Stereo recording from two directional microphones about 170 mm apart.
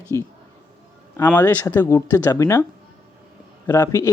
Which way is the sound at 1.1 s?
10° left (ahead or behind).